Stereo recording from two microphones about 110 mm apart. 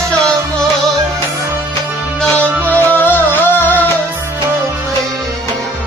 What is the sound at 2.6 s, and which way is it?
Music, 15° left (ahead or behind).